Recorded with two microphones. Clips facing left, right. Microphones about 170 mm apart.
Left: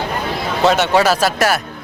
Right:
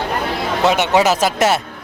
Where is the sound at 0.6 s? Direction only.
15° right (ahead or behind).